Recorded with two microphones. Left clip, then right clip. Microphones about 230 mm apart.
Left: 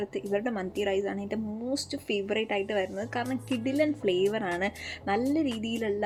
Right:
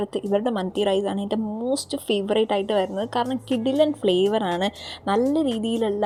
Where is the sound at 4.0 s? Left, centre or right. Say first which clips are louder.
Right 6 dB; right.